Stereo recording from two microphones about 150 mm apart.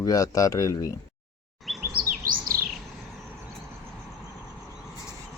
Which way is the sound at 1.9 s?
70° right (ahead or behind).